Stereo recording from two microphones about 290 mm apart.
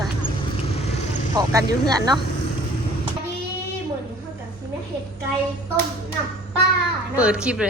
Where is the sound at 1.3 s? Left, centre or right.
Centre.